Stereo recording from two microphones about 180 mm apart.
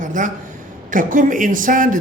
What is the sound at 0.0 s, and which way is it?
A man's voice, 45° right (ahead or behind).